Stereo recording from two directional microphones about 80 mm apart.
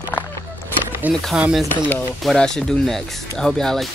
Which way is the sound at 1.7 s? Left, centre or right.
Left.